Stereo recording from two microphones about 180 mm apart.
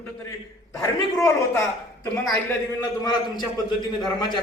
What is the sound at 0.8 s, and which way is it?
Speech, 15° left (ahead or behind).